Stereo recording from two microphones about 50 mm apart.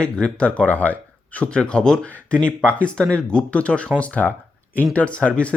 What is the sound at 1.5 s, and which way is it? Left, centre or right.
Speech, centre.